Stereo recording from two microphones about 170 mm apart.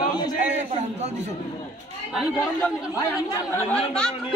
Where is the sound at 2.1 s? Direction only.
5° right (ahead or behind).